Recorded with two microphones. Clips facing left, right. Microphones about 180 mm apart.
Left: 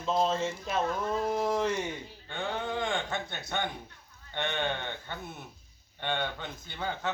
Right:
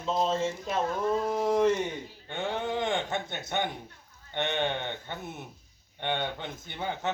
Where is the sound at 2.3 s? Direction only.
20° right (ahead or behind).